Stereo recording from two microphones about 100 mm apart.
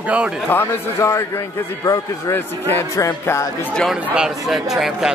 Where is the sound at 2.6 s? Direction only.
25° left (ahead or behind).